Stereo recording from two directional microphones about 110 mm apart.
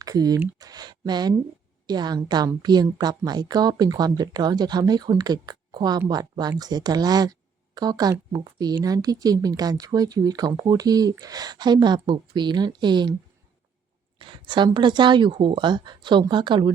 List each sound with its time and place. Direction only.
0.0 s speech: 35° right (ahead or behind)
14.2 s speech: 50° right (ahead or behind)